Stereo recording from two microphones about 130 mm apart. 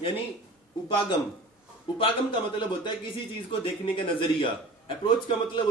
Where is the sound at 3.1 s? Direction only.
40° left (ahead or behind).